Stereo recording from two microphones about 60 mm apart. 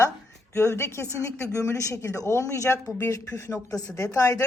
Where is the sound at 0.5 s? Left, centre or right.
Left.